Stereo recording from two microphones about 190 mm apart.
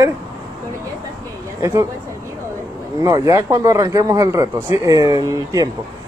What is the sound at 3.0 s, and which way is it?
Speech, 20° right (ahead or behind).